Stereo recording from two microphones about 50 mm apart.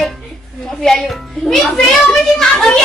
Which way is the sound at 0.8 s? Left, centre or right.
Centre.